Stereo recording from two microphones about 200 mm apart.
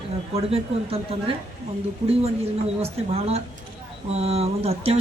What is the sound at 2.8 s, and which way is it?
Speech, 30° right (ahead or behind).